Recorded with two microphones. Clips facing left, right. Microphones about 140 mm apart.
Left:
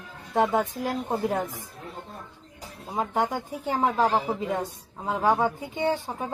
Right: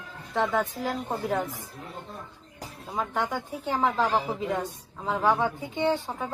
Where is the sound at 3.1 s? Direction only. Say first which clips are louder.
Left 4 dB; 40° left (ahead or behind).